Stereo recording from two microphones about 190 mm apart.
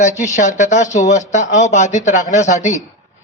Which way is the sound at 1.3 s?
40° left (ahead or behind).